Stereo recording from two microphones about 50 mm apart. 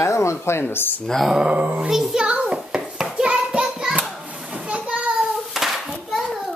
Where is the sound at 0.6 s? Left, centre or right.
Left.